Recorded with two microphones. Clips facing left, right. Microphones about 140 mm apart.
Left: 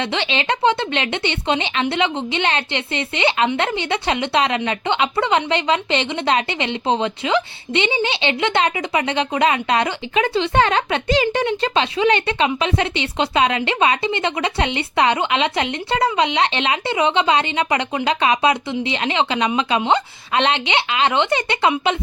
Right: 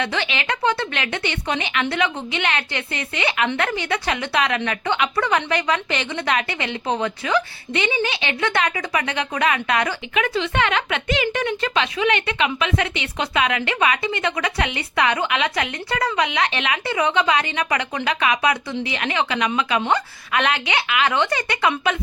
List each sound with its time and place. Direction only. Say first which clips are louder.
0.0 s a woman's voice: left 2 dB; 25° left (ahead or behind)